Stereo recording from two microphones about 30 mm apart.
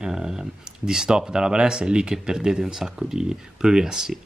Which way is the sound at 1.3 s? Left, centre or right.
Right.